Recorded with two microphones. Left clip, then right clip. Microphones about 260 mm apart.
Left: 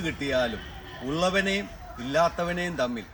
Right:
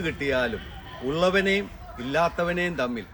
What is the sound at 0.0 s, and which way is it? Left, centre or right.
A man's voice, centre.